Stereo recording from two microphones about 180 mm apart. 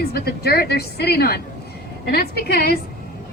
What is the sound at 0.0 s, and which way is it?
A woman's voice, 60° left (ahead or behind).